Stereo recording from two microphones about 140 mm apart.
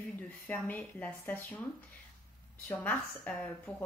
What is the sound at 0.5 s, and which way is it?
Speech, 10° left (ahead or behind).